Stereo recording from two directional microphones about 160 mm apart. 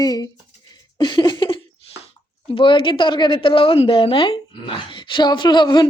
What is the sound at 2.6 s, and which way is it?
A woman's voice, 30° left (ahead or behind).